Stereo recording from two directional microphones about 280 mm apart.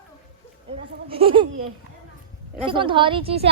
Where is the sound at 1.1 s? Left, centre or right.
Centre.